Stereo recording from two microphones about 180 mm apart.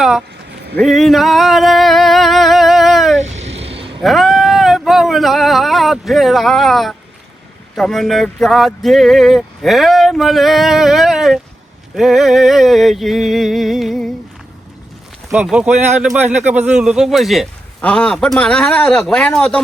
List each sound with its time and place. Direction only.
0.8 s a sound: centre (ahead or behind)
3.6 s vehicle: 30° right (ahead or behind)
4.0 s speech: centre (ahead or behind)
15.3 s speech: 5° right (ahead or behind)
15.7 s speech: 40° right (ahead or behind)
16.0 s speech: 5° right (ahead or behind)